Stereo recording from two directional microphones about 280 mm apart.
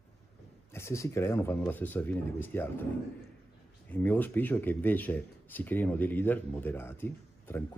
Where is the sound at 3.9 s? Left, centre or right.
Centre.